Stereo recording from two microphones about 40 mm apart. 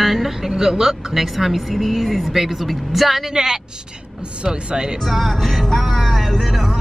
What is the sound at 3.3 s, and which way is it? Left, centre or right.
Speech, centre.